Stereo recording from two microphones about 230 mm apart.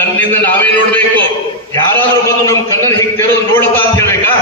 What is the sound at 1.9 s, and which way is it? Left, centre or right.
A man's voice, centre.